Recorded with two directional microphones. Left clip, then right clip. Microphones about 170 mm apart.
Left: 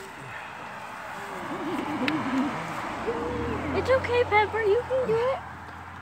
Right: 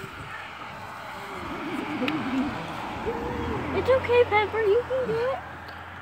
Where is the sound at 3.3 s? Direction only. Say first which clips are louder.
Even; 45° right (ahead or behind).